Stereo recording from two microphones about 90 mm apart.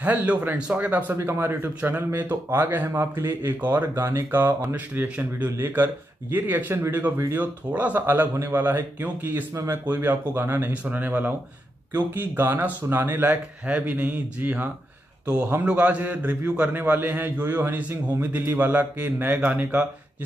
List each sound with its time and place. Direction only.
0.0 s a man's voice: 20° right (ahead or behind)
1.1 s a man's voice: 30° right (ahead or behind)